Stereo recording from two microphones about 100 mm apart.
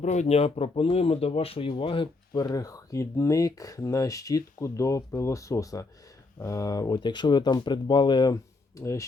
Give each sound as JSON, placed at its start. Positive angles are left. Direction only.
{"t": 0.3, "sound": "speech", "side_deg": 90}
{"t": 2.3, "sound": "speech", "side_deg": 40}
{"t": 8.8, "sound": "speech", "side_deg": 30}